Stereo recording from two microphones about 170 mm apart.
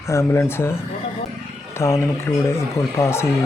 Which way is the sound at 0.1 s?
15° left (ahead or behind).